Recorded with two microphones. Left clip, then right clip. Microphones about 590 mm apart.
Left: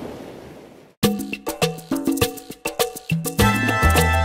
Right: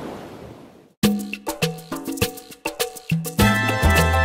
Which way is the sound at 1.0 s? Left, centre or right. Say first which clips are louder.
Left 1 dB; left.